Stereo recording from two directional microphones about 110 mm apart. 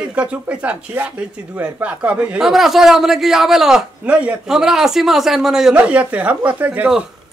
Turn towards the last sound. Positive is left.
turn(degrees=-15)  # may be behind; listen again after turning